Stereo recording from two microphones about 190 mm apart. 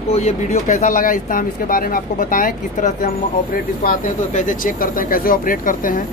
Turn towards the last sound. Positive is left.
turn(degrees=45)  # may be behind; listen again after turning